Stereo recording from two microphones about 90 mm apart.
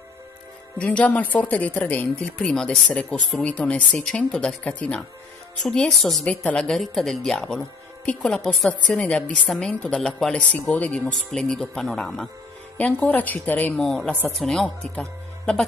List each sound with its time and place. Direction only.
0.7 s speech: 15° left (ahead or behind)
2.3 s speech: 5° left (ahead or behind)
6.2 s speech: 15° left (ahead or behind)
10.3 s speech: 15° left (ahead or behind)
12.7 s a woman's voice: 15° left (ahead or behind)
13.7 s speech: 5° left (ahead or behind)